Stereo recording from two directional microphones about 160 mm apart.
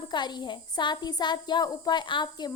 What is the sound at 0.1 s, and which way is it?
Speech, 25° left (ahead or behind).